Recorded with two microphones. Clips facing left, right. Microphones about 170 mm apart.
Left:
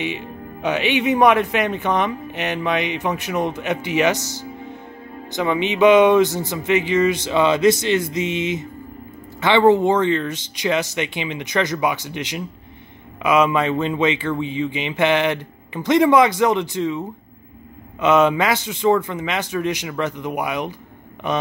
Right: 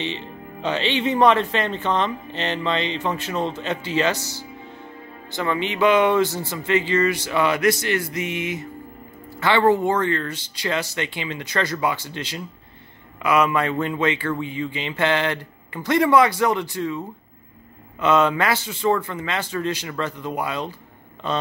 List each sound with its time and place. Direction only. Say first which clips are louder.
0.0 s speech: left 3 dB; 10° left (ahead or behind)
18.0 s speech: left 3 dB; 20° left (ahead or behind)